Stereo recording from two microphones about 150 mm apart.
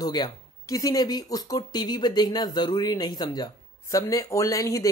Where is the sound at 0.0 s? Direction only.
25° left (ahead or behind).